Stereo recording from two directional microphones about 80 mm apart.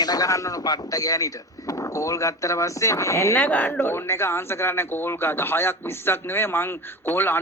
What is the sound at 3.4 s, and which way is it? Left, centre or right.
Speech, centre.